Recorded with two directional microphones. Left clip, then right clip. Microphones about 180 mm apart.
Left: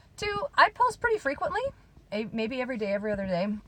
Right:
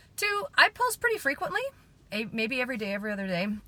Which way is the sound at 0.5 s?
25° right (ahead or behind).